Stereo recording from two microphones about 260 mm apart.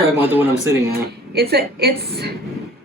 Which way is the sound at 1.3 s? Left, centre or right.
Right.